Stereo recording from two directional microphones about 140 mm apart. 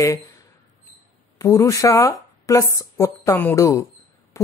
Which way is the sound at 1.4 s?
20° left (ahead or behind).